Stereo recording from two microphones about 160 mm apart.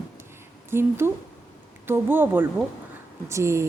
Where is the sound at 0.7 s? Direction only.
15° right (ahead or behind).